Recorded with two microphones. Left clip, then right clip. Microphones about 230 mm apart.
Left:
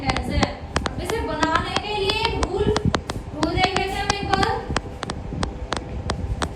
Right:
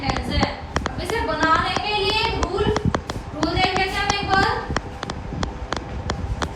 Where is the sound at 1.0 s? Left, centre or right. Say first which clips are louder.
Right 5 dB; right.